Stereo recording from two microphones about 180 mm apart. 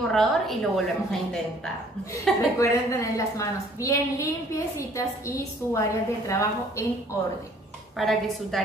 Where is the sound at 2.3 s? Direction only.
Centre (ahead or behind).